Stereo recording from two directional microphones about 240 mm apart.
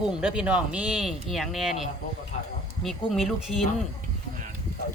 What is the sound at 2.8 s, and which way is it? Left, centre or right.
Speech, centre.